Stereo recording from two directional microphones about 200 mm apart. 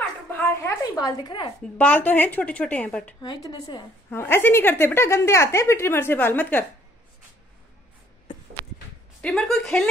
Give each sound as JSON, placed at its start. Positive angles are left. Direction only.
{"t": 0.3, "sound": "a sound", "side_deg": 10}
{"t": 1.8, "sound": "a woman's voice", "side_deg": 5}
{"t": 3.2, "sound": "a woman's voice", "side_deg": 20}
{"t": 9.2, "sound": "speech", "side_deg": 0}